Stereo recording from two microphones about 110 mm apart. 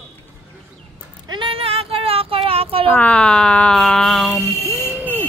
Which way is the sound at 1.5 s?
60° right (ahead or behind).